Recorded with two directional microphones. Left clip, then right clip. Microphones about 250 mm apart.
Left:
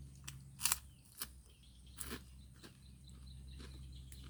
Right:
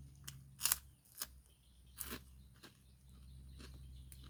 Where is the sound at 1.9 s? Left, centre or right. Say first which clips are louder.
Left 1 dB; centre.